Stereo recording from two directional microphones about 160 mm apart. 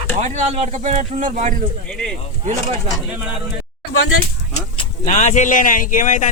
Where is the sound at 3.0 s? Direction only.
5° right (ahead or behind).